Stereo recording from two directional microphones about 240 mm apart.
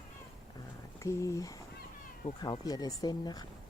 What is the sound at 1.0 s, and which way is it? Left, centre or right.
Speech, centre.